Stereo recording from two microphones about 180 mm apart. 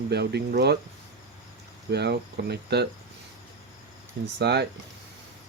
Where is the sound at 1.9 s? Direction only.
65° right (ahead or behind).